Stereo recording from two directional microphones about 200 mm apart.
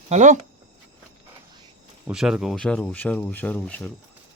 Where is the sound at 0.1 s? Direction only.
35° right (ahead or behind).